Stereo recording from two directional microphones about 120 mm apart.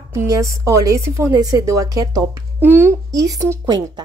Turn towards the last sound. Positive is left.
turn(degrees=-30)  # may be behind; listen again after turning